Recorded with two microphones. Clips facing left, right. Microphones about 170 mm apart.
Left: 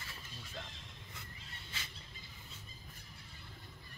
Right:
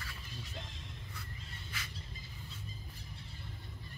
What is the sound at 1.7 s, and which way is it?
Vehicle, 25° left (ahead or behind).